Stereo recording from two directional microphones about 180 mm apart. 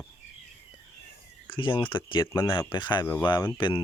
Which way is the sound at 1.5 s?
25° left (ahead or behind).